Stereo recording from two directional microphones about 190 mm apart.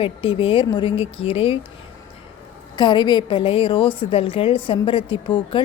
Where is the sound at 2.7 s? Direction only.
25° left (ahead or behind).